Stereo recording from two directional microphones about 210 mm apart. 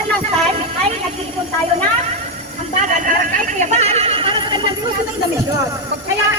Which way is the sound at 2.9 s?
40° right (ahead or behind).